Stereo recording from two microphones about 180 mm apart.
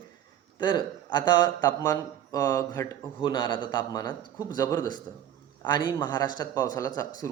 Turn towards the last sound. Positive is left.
turn(degrees=20)  # may be behind; listen again after turning